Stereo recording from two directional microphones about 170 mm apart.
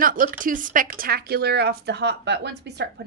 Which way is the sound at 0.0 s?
55° right (ahead or behind).